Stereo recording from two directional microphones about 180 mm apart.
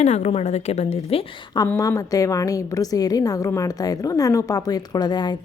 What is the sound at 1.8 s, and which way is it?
A woman's voice, 20° left (ahead or behind).